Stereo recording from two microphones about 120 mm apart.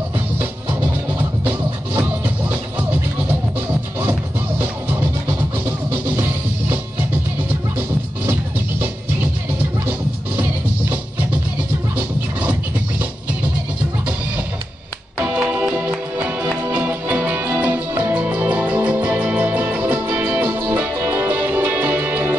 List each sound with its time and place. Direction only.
2.0 s music: 15° right (ahead or behind)
4.0 s music: 15° right (ahead or behind)
9.8 s music: 20° right (ahead or behind)
15.1 s music: 5° right (ahead or behind)